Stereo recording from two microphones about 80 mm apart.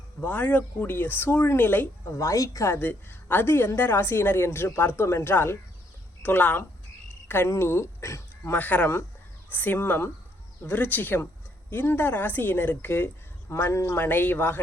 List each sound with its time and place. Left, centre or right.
0.2 s a woman's voice: left
2.0 s a woman's voice: left
2.7 s a woman's voice: left
8.5 s a woman's voice: centre